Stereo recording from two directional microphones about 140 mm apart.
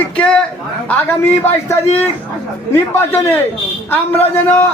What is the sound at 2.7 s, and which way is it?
Speech, 15° left (ahead or behind).